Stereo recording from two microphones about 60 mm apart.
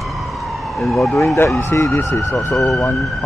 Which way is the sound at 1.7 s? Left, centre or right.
Left.